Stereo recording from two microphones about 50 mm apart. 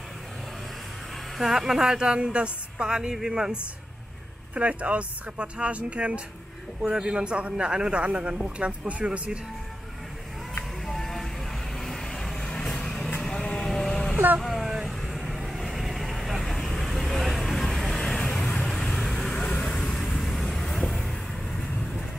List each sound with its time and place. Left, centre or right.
1.4 s a woman's voice: centre
4.6 s speech: right
10.9 s music: centre
11.7 s vehicle: centre
14.1 s vehicle: right
14.4 s vehicle: centre